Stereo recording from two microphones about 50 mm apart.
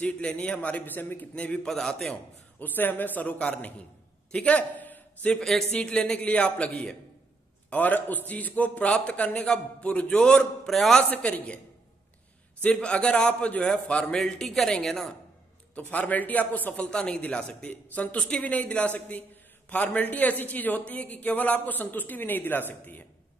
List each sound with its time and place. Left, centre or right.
0.0 s a man's voice: left
1.3 s a man's voice: left
1.7 s speech: centre
2.6 s a man's voice: left
5.4 s a man's voice: centre
5.7 s a man's voice: centre
7.7 s a man's voice: left; by 10.7 s centre
10.7 s a man's voice: centre
11.1 s a man's voice: left
12.8 s a man's voice: left
14.1 s speech: centre
15.7 s a man's voice: left
16.7 s a man's voice: centre
17.6 s a man's voice: left